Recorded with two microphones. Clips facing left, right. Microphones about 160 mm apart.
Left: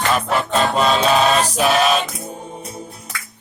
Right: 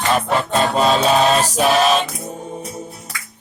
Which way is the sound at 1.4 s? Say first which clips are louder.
Right 1 dB; 40° right (ahead or behind).